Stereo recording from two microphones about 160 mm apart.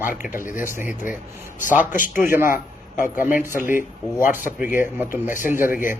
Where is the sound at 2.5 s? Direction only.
55° left (ahead or behind).